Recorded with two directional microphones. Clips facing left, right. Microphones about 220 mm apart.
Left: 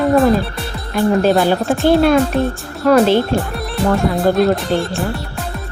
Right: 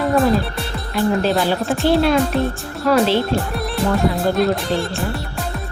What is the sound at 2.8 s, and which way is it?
Speech, 50° left (ahead or behind).